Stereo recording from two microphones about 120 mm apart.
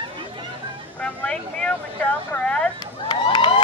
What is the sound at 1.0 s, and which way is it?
Vehicle, 10° left (ahead or behind).